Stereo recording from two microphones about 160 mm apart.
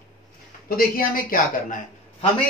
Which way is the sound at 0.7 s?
65° left (ahead or behind).